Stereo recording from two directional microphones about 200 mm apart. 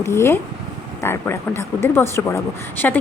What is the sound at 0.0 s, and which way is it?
A woman's voice, 15° left (ahead or behind).